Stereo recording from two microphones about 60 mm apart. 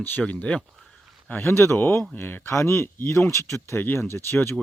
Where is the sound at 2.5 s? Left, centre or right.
Left.